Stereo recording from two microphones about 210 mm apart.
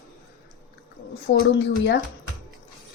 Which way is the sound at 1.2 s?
55° left (ahead or behind).